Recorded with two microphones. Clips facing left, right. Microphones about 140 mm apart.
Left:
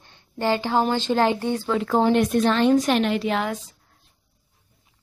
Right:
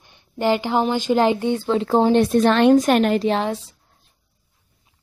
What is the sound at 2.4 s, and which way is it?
A woman's voice, 60° right (ahead or behind).